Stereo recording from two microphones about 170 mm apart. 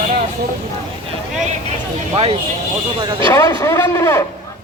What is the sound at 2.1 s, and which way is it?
Speech, 35° right (ahead or behind).